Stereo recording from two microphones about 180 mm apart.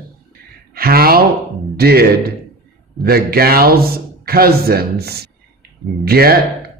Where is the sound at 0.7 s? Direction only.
55° right (ahead or behind).